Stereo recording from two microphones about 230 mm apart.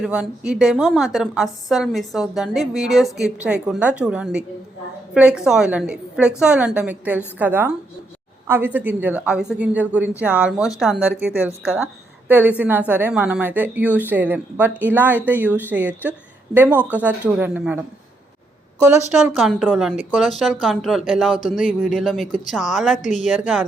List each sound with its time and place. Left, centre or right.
0.0 s a woman's voice: centre
19.3 s a woman's voice: centre
21.3 s speech: left
21.9 s a woman's voice: centre
23.0 s speech: left